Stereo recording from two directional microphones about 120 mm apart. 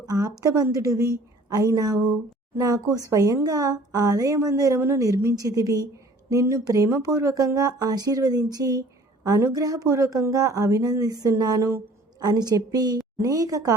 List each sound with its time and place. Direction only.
0.0 s a woman's voice: 30° right (ahead or behind)